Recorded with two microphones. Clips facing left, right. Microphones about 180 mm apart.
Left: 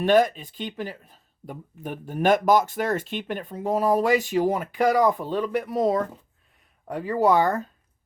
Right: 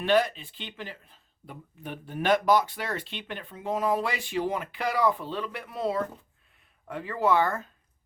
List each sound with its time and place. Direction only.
0.0 s speech: 45° left (ahead or behind)